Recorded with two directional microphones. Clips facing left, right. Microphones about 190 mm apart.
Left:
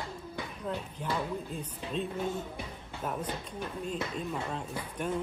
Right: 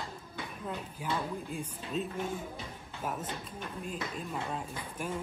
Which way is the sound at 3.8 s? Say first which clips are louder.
Left 4 dB; 5° right (ahead or behind).